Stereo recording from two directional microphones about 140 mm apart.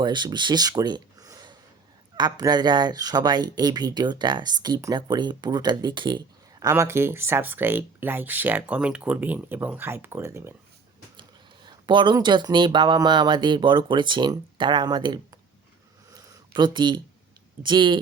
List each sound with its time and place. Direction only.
0.0 s speech: 30° right (ahead or behind)
11.2 s speech: 35° right (ahead or behind)
16.6 s speech: 35° right (ahead or behind)